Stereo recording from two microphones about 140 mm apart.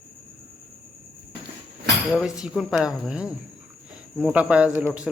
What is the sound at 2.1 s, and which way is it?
Speech, 5° right (ahead or behind).